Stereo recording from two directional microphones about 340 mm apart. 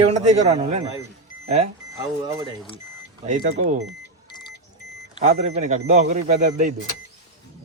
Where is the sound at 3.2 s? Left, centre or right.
Right.